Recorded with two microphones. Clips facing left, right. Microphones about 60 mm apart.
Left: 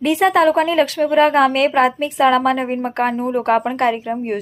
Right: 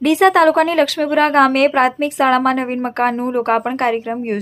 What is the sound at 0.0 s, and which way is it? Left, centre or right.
A woman's voice, right.